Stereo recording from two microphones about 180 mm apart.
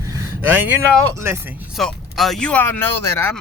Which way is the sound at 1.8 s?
Centre (ahead or behind).